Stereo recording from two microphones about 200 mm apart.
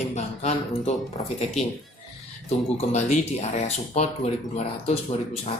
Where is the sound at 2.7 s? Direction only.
35° left (ahead or behind).